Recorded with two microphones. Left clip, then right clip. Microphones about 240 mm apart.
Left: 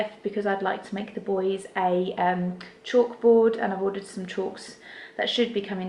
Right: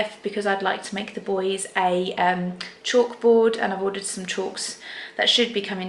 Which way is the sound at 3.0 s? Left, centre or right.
Left.